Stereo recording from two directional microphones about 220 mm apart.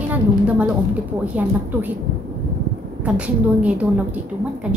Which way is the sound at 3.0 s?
5° right (ahead or behind).